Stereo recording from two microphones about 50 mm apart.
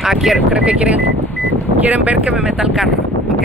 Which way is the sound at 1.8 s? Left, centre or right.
Right.